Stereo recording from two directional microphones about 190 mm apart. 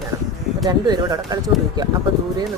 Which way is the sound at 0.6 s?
20° right (ahead or behind).